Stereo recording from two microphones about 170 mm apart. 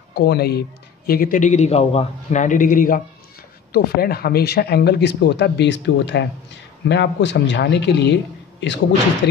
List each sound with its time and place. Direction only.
0.1 s a man's voice: 70° left (ahead or behind); by 3.0 s 50° left (ahead or behind)
3.7 s speech: 65° left (ahead or behind); by 8.7 s 90° left
9.2 s speech: 75° left (ahead or behind)